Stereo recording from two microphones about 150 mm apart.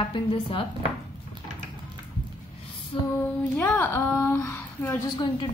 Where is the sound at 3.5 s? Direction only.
15° left (ahead or behind).